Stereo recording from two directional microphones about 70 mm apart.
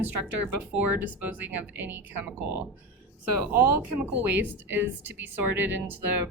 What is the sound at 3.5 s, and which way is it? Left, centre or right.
Speech, right.